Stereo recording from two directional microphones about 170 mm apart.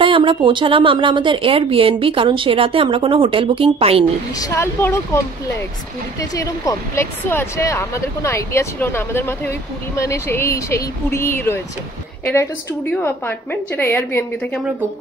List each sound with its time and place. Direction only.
0.0 s a woman's voice: 30° right (ahead or behind)
4.4 s speech: 15° left (ahead or behind)
6.3 s speech: 20° left (ahead or behind)
13.0 s speech: 10° left (ahead or behind)